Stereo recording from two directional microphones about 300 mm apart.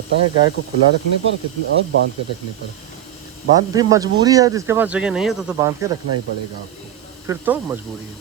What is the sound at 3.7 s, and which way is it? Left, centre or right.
Speech, centre.